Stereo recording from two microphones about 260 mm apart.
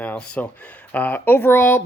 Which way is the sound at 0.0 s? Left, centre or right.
Centre.